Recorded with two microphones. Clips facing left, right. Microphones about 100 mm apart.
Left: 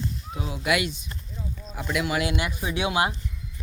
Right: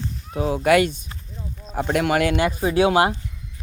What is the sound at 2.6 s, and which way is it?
Speech, 40° right (ahead or behind).